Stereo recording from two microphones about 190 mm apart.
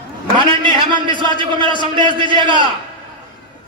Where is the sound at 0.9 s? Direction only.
25° right (ahead or behind).